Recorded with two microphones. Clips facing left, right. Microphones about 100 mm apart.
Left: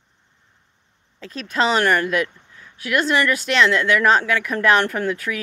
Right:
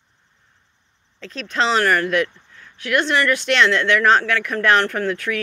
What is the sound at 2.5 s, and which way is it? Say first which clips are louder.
Speech: right 1 dB; 10° left (ahead or behind).